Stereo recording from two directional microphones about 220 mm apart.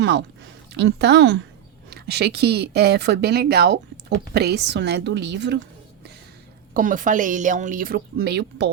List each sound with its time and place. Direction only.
0.0 s a woman's voice: 50° right (ahead or behind)
6.7 s speech: 35° right (ahead or behind)